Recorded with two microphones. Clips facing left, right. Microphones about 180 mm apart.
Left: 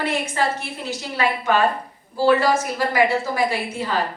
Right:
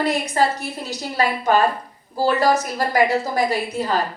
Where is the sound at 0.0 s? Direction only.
40° right (ahead or behind).